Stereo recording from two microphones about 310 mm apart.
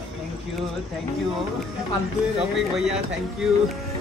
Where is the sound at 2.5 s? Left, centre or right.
Centre.